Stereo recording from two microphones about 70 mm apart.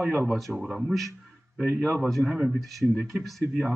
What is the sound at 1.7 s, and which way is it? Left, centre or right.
Speech, right.